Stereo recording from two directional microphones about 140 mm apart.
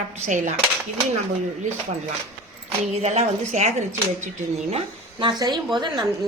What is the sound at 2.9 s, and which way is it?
A woman's voice, 55° right (ahead or behind).